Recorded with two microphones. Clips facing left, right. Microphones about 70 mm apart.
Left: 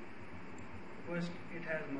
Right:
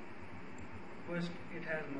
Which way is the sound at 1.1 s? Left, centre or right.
Centre.